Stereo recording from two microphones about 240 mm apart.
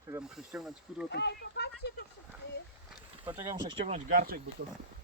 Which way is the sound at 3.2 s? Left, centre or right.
Centre.